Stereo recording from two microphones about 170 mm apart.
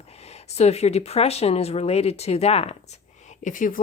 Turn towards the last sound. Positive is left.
turn(degrees=50)  # may be behind; listen again after turning